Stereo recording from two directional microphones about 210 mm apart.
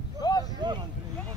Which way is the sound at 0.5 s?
20° right (ahead or behind).